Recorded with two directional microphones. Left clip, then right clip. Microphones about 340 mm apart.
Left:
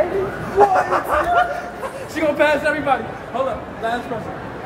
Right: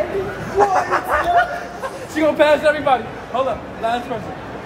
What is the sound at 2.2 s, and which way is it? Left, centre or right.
Speech, right.